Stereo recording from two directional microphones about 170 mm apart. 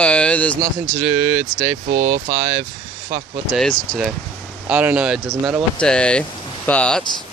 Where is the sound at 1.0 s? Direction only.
20° right (ahead or behind).